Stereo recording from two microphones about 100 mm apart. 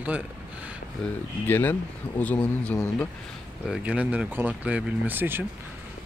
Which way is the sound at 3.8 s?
15° right (ahead or behind).